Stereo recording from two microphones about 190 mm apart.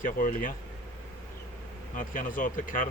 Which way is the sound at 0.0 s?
45° left (ahead or behind).